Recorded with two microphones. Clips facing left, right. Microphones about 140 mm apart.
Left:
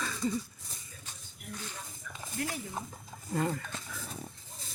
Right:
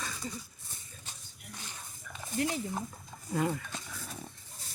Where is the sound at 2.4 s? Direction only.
20° right (ahead or behind).